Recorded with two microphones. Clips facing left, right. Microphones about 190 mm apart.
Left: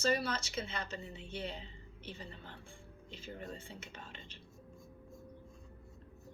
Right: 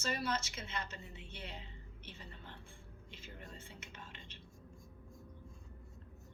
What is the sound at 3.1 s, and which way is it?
Speech, 30° left (ahead or behind).